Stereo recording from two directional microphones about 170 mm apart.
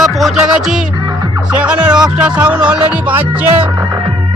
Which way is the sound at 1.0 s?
25° right (ahead or behind).